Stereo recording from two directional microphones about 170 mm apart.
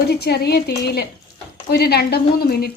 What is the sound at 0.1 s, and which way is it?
A woman's voice, 70° left (ahead or behind).